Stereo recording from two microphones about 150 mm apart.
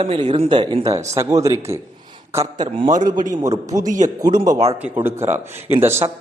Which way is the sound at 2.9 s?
60° right (ahead or behind).